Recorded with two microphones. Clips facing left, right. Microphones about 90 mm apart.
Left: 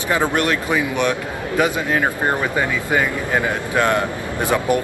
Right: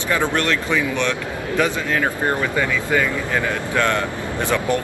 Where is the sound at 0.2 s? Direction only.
15° left (ahead or behind).